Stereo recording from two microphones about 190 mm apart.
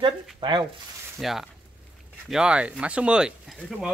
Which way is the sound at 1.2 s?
Centre (ahead or behind).